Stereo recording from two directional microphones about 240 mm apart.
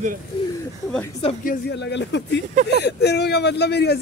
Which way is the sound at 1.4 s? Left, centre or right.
Left.